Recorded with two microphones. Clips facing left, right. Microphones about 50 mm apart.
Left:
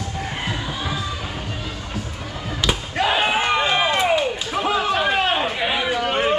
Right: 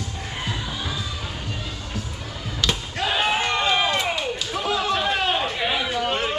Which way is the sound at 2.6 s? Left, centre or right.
Centre.